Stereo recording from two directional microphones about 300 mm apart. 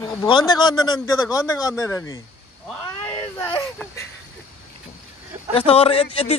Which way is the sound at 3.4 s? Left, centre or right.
Centre.